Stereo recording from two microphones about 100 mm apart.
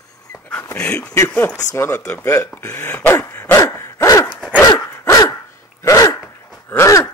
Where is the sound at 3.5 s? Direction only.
30° left (ahead or behind).